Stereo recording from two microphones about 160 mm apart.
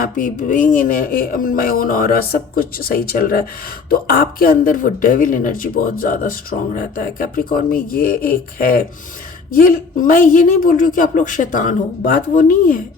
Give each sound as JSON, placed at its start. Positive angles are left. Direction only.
{"t": 0.0, "sound": "speech", "side_deg": 55}